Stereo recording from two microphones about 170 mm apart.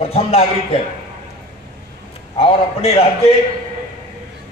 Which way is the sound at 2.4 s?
30° left (ahead or behind).